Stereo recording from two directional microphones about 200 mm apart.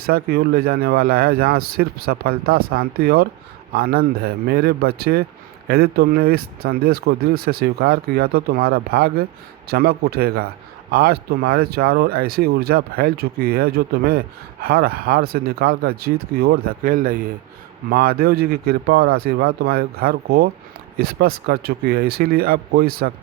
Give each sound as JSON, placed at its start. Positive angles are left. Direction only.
{"t": 0.0, "sound": "speech", "side_deg": -50}